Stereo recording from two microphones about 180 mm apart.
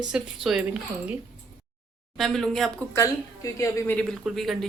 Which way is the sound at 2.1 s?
Centre (ahead or behind).